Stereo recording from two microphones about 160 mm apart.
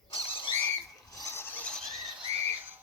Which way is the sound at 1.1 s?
15° left (ahead or behind).